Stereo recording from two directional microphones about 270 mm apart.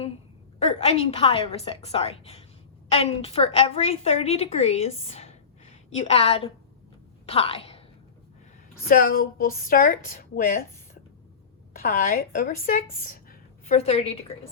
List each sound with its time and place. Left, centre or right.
0.6 s a woman's voice: left
8.9 s a woman's voice: left
11.7 s a woman's voice: left